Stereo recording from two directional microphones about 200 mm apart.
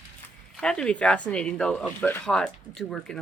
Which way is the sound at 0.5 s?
5° left (ahead or behind).